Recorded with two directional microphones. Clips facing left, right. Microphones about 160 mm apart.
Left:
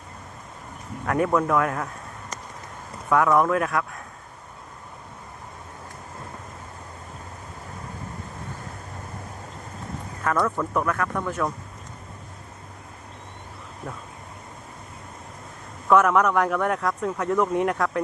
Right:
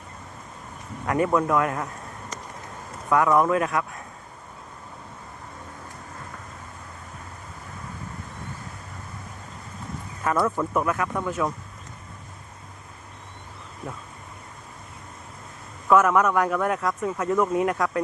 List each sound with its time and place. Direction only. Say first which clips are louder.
1.0 s speech: even; centre (ahead or behind)
3.1 s speech: even; centre (ahead or behind)
10.2 s speech: right 1 dB; 5° right (ahead or behind)
15.9 s speech: even; centre (ahead or behind)